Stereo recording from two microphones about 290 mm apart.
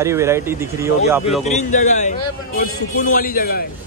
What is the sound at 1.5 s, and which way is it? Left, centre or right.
A man's voice, left.